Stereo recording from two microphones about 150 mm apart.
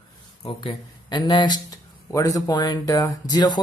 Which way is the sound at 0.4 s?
30° left (ahead or behind).